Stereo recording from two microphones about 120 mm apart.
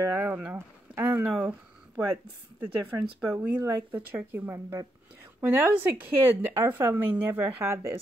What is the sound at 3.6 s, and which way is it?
Speech, 15° right (ahead or behind).